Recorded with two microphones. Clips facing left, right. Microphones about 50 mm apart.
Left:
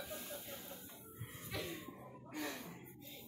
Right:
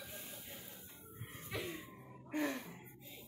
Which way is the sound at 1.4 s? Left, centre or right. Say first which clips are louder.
Right 2 dB; centre.